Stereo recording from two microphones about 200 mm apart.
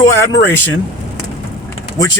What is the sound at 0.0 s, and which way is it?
Speech, 10° left (ahead or behind).